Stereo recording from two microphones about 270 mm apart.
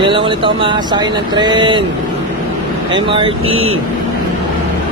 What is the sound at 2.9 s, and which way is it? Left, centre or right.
Speech, centre.